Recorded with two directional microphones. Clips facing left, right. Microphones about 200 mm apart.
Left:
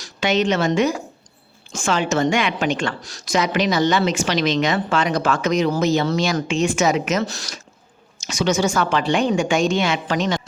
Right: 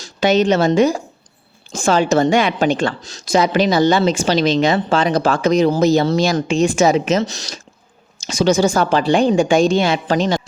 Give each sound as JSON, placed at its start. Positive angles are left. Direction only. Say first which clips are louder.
{"t": 0.0, "sound": "a woman's voice", "louder": "right 5 dB", "side_deg": -35}